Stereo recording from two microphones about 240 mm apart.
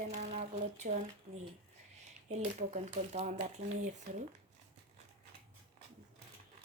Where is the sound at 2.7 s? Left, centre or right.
Right.